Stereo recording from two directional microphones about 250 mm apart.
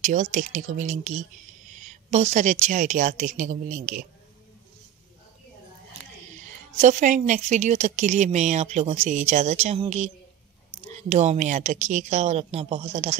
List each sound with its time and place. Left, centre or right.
0.0 s a woman's voice: right
6.4 s a woman's voice: right